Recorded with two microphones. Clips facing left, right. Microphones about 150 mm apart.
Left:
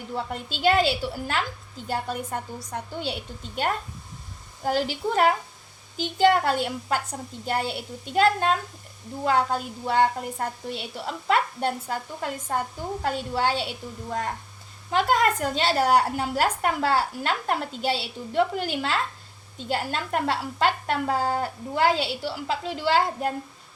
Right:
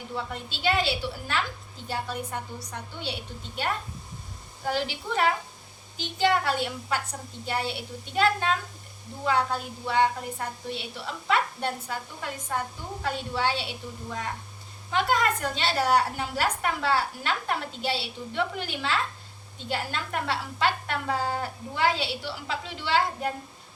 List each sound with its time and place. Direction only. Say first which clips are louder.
0.1 s a woman's voice: left 4 dB; 45° left (ahead or behind)
4.6 s a woman's voice: left 4 dB; 40° left (ahead or behind)